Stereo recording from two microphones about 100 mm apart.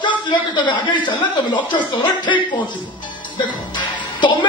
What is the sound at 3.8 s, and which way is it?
Music, 50° left (ahead or behind).